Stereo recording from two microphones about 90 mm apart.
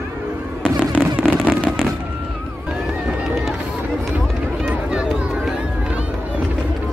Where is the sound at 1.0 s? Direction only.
Centre (ahead or behind).